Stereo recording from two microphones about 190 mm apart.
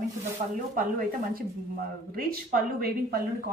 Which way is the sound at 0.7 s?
45° right (ahead or behind).